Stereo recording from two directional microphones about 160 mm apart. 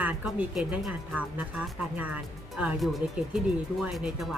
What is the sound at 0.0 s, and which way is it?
Speech, 10° right (ahead or behind).